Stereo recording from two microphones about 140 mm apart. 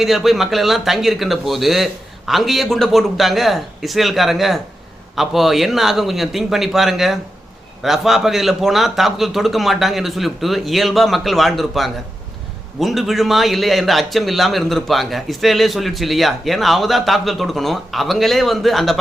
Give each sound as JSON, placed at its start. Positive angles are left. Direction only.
{"t": 0.0, "sound": "a man's voice", "side_deg": 0}